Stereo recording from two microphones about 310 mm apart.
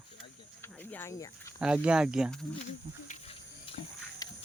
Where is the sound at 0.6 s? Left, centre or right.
Centre.